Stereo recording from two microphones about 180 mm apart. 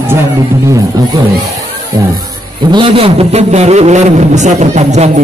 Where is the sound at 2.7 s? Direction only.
30° right (ahead or behind).